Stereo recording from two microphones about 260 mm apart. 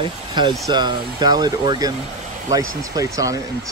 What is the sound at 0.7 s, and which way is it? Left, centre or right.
Speech, centre.